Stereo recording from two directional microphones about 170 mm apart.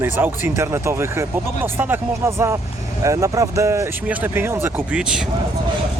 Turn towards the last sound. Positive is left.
turn(degrees=-5)  # may be behind; listen again after turning